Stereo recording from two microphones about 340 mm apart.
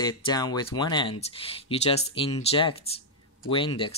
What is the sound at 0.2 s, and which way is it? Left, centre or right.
Speech, centre.